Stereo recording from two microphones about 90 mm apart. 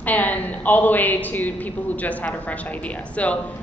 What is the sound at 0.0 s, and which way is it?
A woman's voice, 20° left (ahead or behind).